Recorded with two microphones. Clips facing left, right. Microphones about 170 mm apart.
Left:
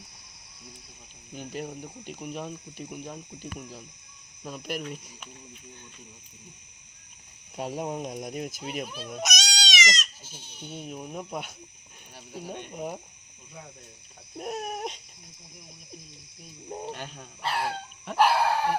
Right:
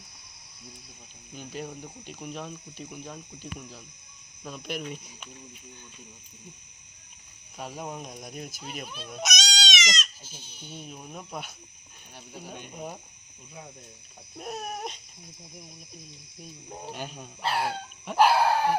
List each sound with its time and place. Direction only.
1.3 s speech: 15° left (ahead or behind)
7.5 s speech: 25° left (ahead or behind)
10.4 s speech: 60° left (ahead or behind)
10.7 s speech: 20° left (ahead or behind)
12.1 s speech: 5° left (ahead or behind)
12.7 s speech: 15° left (ahead or behind)
14.3 s speech: 15° left (ahead or behind)
16.8 s speech: 5° right (ahead or behind)